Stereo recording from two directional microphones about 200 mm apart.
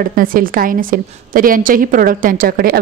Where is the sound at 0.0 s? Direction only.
45° right (ahead or behind).